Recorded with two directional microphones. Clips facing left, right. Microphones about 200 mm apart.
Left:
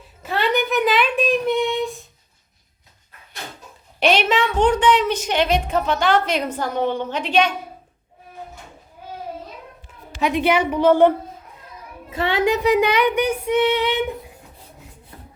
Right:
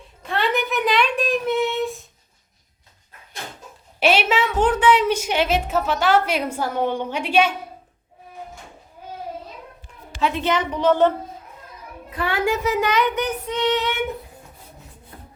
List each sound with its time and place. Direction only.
0.2 s a sound: 5° left (ahead or behind)
4.0 s a woman's voice: 5° right (ahead or behind)
10.2 s child singing: 15° left (ahead or behind)
12.1 s child singing: 25° left (ahead or behind)